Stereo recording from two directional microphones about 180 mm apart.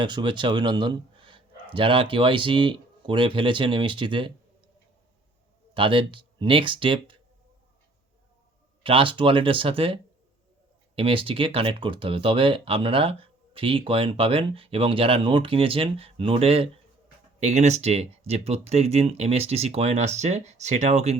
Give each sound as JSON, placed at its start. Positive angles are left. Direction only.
{"t": 0.0, "sound": "speech", "side_deg": -25}
{"t": 5.7, "sound": "speech", "side_deg": -30}
{"t": 8.8, "sound": "speech", "side_deg": -30}